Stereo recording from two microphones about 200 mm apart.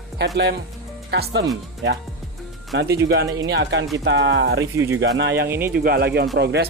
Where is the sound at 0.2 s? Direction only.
55° right (ahead or behind).